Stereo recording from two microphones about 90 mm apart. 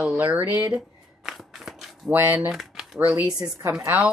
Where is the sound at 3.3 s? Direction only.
45° right (ahead or behind).